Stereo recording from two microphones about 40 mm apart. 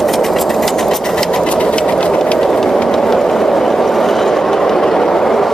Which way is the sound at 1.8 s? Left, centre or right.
Centre.